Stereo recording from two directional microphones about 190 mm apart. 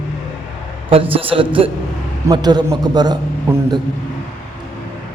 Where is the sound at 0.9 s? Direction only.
30° right (ahead or behind).